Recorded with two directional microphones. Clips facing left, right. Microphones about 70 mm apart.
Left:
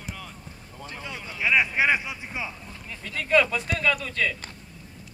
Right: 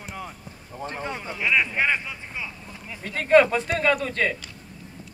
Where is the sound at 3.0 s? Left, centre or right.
Right.